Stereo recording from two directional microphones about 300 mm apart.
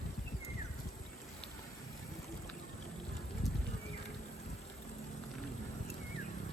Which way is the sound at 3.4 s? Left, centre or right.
Centre.